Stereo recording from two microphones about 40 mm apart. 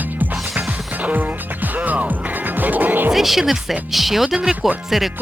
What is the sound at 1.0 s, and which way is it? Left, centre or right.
Music, right.